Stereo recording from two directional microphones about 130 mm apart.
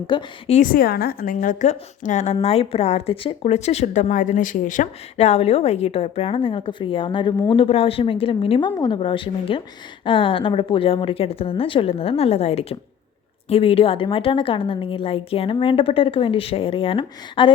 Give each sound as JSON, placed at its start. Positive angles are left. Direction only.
{"t": 0.1, "sound": "a woman's voice", "side_deg": 40}
{"t": 0.4, "sound": "a woman's voice", "side_deg": 75}
{"t": 1.2, "sound": "a woman's voice", "side_deg": 90}